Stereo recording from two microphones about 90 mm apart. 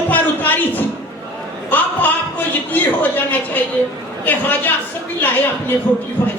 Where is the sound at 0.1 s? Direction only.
20° left (ahead or behind).